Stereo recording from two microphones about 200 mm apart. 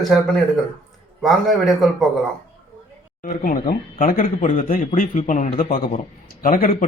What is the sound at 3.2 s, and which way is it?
Speech, 40° left (ahead or behind).